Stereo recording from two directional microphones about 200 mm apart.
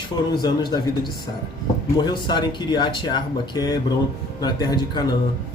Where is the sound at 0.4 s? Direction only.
20° left (ahead or behind).